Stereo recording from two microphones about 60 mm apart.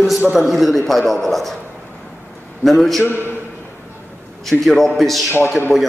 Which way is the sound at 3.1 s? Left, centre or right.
Left.